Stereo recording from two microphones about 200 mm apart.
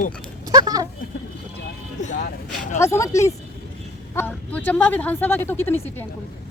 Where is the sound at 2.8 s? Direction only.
15° left (ahead or behind).